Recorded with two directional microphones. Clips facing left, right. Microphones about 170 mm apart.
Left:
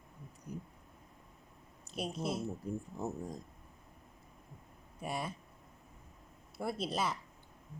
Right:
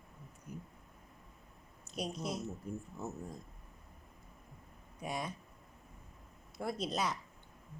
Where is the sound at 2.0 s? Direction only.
Centre (ahead or behind).